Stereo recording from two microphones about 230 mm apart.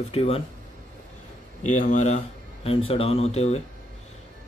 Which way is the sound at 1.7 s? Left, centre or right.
Left.